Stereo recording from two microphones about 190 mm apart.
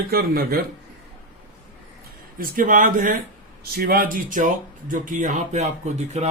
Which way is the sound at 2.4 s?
45° right (ahead or behind).